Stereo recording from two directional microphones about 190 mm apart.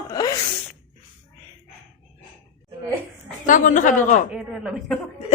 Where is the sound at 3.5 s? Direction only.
40° left (ahead or behind).